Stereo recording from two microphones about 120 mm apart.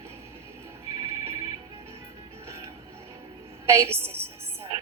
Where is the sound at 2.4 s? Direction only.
25° right (ahead or behind).